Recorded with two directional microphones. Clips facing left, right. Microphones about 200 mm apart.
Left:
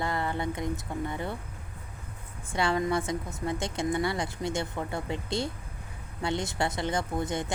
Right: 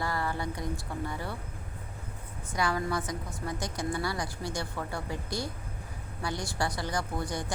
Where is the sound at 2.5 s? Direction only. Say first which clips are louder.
Left 3 dB; 25° left (ahead or behind).